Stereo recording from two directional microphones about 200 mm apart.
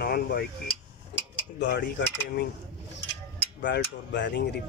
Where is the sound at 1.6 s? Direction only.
60° left (ahead or behind).